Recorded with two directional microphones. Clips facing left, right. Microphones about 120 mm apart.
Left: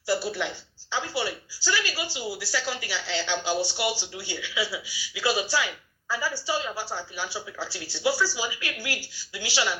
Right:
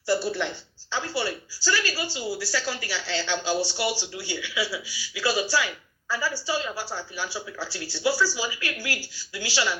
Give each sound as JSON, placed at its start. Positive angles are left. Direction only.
{"t": 0.1, "sound": "a woman's voice", "side_deg": 10}